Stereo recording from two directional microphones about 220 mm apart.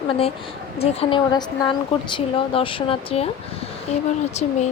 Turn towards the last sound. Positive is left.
turn(degrees=30)  # may be behind; listen again after turning